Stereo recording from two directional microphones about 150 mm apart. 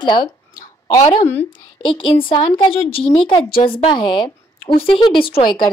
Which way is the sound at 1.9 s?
35° left (ahead or behind).